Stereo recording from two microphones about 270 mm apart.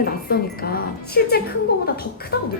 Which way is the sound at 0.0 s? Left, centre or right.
Left.